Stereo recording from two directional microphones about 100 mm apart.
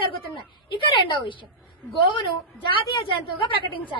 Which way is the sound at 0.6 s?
55° left (ahead or behind).